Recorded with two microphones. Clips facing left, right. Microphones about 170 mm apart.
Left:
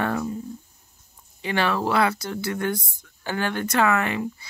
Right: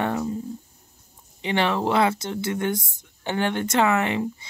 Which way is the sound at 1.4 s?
20° right (ahead or behind).